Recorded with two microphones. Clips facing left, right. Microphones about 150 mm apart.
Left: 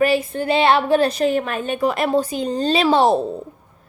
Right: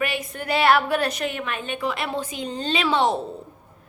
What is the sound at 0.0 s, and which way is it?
A woman's voice, 30° left (ahead or behind).